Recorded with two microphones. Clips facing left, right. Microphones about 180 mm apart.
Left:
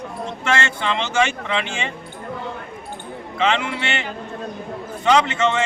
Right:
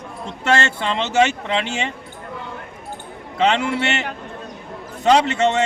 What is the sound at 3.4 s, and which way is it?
A man's voice, 40° right (ahead or behind).